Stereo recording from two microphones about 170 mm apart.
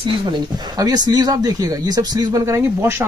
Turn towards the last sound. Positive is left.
turn(degrees=-15)  # may be behind; listen again after turning